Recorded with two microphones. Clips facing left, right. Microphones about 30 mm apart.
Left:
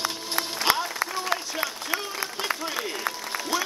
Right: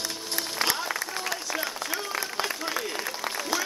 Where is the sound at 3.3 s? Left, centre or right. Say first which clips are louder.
Left 2 dB; centre.